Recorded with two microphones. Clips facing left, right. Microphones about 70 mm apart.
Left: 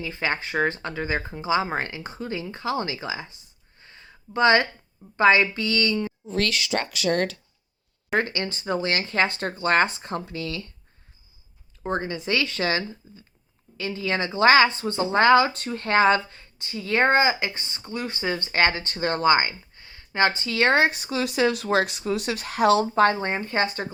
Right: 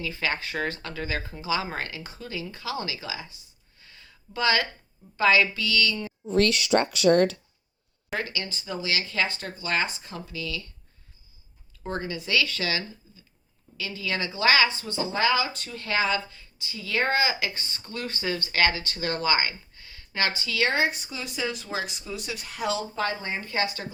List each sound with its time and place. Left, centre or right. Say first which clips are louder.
0.0 s speech: left 2 dB; left
3.8 s a sound: left 4 dB; left
5.1 s speech: left 3 dB; left
8.1 s speech: left 6 dB; left
11.8 s speech: left 4 dB; left
23.4 s speech: left 4 dB; left